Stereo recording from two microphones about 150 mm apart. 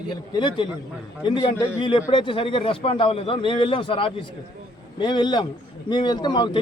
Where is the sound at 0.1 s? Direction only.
30° left (ahead or behind).